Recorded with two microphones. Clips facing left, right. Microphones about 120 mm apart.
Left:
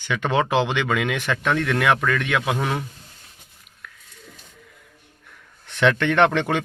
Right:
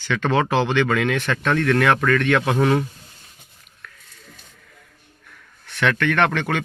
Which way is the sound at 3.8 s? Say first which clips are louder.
Even; 10° left (ahead or behind).